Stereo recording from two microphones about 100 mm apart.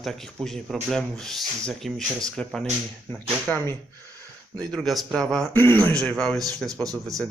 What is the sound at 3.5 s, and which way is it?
Speech, 15° left (ahead or behind).